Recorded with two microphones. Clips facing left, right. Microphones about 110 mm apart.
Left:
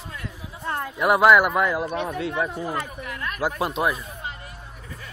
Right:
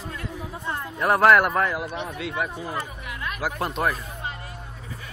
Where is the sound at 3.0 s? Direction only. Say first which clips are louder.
Left 1 dB; 45° left (ahead or behind).